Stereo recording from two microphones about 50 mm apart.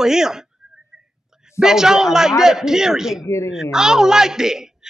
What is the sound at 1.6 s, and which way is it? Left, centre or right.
A man's voice, centre.